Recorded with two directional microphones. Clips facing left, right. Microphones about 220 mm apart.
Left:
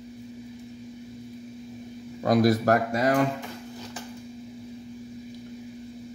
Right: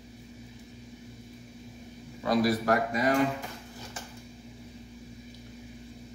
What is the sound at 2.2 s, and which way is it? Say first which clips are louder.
Speech: left 5 dB; 45° left (ahead or behind).